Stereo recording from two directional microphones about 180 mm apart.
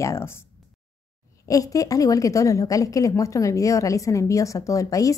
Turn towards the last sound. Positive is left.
turn(degrees=20)  # may be behind; listen again after turning